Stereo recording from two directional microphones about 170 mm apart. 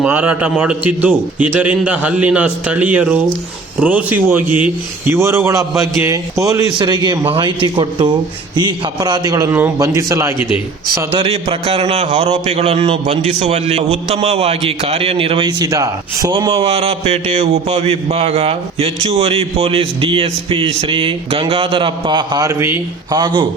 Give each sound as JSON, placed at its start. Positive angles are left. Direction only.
{"t": 0.0, "sound": "a man's voice", "side_deg": -10}
{"t": 11.1, "sound": "a man's voice", "side_deg": -35}
{"t": 23.2, "sound": "a man's voice", "side_deg": -25}